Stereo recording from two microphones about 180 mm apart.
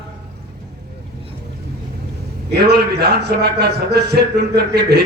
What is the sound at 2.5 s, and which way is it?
A man's voice, 65° right (ahead or behind).